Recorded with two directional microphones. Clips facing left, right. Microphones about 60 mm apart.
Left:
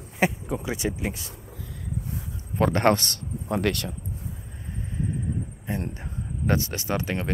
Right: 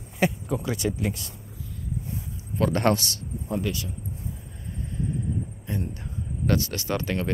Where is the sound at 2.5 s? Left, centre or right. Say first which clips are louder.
Left 2 dB; left.